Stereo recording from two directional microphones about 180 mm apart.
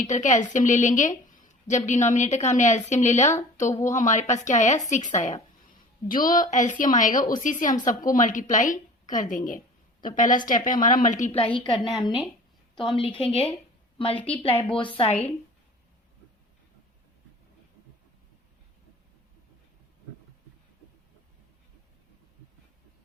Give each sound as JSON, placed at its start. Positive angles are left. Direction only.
{"t": 0.0, "sound": "a woman's voice", "side_deg": 40}
{"t": 11.8, "sound": "a woman's voice", "side_deg": 0}
{"t": 13.0, "sound": "a woman's voice", "side_deg": 30}